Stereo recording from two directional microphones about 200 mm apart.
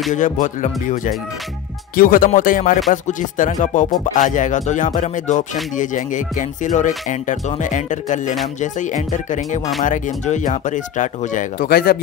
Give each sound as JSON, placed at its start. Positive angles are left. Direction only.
{"t": 0.1, "sound": "speech", "side_deg": 40}